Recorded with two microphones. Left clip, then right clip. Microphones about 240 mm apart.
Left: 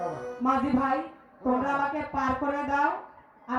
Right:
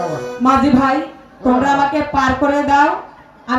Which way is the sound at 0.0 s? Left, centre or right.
Right.